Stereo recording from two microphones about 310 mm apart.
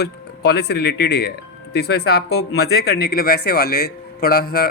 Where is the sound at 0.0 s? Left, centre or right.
Left.